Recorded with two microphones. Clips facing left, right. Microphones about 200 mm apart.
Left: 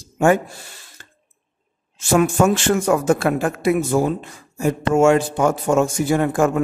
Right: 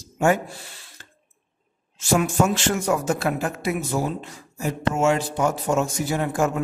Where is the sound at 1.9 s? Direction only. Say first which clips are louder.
Left 4 dB; 50° left (ahead or behind).